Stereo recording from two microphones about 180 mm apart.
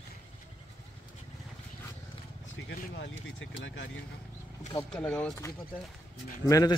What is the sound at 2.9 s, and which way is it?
Speech, 90° left.